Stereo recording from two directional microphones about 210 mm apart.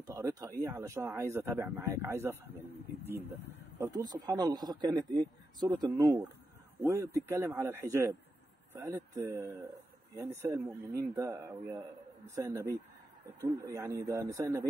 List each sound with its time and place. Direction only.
0.0 s speech: 15° right (ahead or behind)
3.7 s speech: 15° right (ahead or behind)